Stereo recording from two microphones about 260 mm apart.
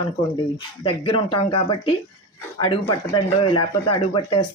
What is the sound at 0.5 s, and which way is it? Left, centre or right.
Speech, centre.